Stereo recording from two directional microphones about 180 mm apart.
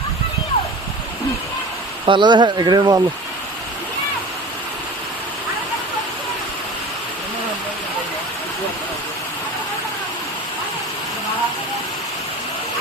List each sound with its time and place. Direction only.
2.0 s speech: 25° right (ahead or behind)